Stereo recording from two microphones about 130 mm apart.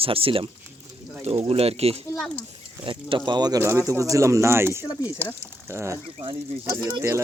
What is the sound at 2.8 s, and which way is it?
Speech, 40° right (ahead or behind).